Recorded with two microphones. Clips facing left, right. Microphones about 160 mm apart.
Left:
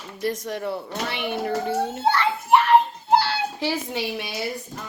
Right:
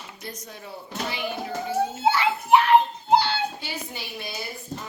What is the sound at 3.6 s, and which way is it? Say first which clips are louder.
Speech: left 10 dB; 85° left.